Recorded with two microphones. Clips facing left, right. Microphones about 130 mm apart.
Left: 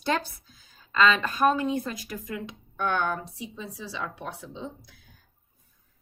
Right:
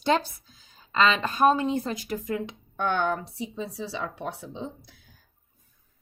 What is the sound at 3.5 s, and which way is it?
Speech, 35° right (ahead or behind).